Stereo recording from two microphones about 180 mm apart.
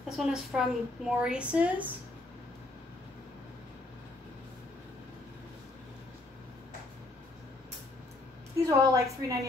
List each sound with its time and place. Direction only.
0.2 s a woman's voice: 5° right (ahead or behind)
8.6 s a woman's voice: 15° right (ahead or behind)